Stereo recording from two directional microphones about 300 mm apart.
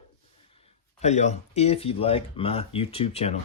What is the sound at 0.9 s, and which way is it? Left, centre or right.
Speech, left.